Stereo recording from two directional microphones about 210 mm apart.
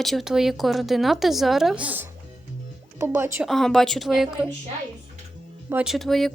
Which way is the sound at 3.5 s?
Centre (ahead or behind).